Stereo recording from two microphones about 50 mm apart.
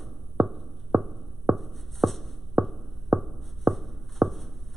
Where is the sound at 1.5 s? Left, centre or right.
Centre.